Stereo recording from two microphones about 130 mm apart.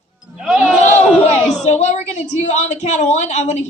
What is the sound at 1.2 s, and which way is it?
Speech, 60° left (ahead or behind).